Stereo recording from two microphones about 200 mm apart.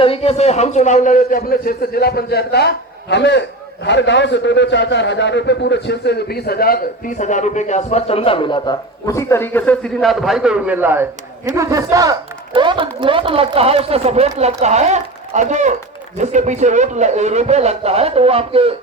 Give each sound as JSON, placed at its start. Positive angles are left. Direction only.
{"t": 0.0, "sound": "a man's voice", "side_deg": 30}